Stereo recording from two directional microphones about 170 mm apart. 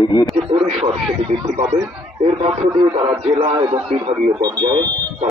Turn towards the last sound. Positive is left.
turn(degrees=-25)  # may be behind; listen again after turning